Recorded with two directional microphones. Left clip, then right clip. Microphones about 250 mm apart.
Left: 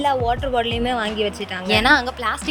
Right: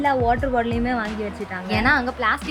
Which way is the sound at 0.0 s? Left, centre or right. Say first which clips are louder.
Even; left.